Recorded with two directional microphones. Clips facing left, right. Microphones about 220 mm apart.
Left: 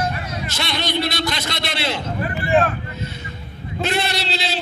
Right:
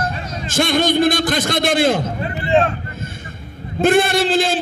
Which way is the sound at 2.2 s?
25° right (ahead or behind).